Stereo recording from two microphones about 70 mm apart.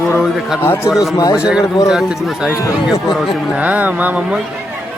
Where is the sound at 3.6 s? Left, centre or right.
Right.